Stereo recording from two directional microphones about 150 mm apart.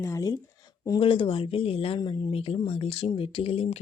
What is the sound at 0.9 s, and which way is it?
Speech, 35° left (ahead or behind).